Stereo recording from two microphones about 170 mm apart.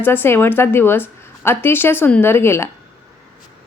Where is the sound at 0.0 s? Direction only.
10° left (ahead or behind).